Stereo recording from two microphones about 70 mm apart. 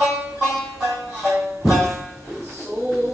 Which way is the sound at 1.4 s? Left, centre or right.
Centre.